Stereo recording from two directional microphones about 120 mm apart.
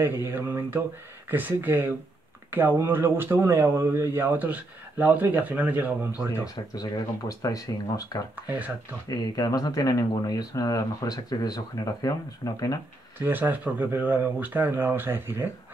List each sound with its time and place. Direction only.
0.0 s speech: 20° right (ahead or behind)
6.4 s speech: 30° left (ahead or behind)
8.4 s speech: 15° right (ahead or behind)
9.1 s speech: 30° left (ahead or behind)
13.2 s speech: 15° right (ahead or behind)